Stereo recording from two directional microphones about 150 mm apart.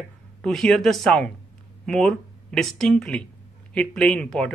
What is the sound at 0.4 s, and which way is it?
A man's voice, 5° left (ahead or behind).